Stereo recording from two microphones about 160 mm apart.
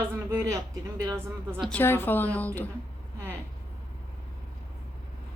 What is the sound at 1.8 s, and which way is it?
Speech, 15° left (ahead or behind).